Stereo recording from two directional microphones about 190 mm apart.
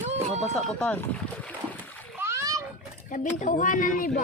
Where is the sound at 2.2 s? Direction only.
15° right (ahead or behind).